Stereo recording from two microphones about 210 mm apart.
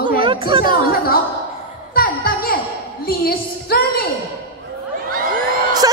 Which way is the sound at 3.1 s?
45° left (ahead or behind).